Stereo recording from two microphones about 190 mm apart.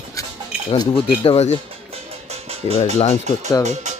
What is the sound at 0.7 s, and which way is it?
Speech, 25° left (ahead or behind).